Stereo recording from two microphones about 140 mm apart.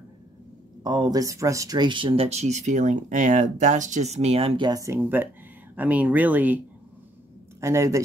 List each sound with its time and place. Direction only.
0.8 s speech: 30° right (ahead or behind)
4.6 s speech: 25° right (ahead or behind)
7.6 s speech: 20° right (ahead or behind)